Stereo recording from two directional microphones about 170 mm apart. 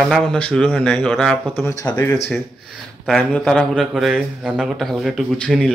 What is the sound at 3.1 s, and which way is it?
Speech, 5° left (ahead or behind).